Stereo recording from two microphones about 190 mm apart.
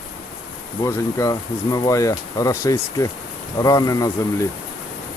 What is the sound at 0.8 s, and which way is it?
Speech, 15° left (ahead or behind).